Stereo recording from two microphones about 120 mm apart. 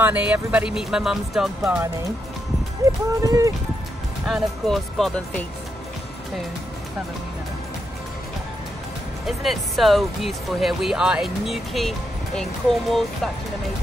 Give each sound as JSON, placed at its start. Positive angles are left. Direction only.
{"t": 0.0, "sound": "speech", "side_deg": -10}
{"t": 3.2, "sound": "speech", "side_deg": -25}
{"t": 4.3, "sound": "speech", "side_deg": 0}
{"t": 9.2, "sound": "speech", "side_deg": 0}